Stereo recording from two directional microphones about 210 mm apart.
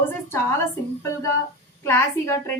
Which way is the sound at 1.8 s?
10° left (ahead or behind).